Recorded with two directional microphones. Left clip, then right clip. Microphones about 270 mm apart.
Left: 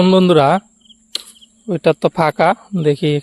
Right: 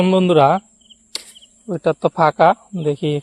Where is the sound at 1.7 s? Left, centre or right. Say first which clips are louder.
Left 3 dB; centre.